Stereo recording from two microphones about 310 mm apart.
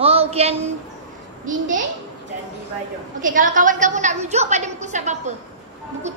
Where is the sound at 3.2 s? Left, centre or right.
Right.